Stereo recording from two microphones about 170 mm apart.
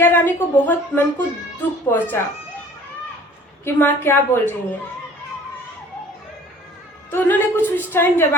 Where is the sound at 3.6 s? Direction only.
15° left (ahead or behind).